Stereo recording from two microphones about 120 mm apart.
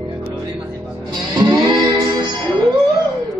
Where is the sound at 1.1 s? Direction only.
35° right (ahead or behind).